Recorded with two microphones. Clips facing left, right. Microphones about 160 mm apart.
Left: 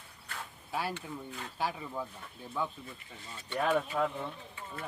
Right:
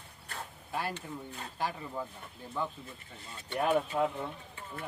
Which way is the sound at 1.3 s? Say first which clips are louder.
Left 1 dB; 35° right (ahead or behind).